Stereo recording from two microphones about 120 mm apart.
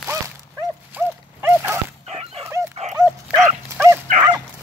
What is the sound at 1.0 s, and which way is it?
Dog, 15° right (ahead or behind).